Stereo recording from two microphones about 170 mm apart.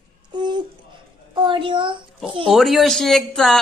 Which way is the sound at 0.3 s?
25° right (ahead or behind).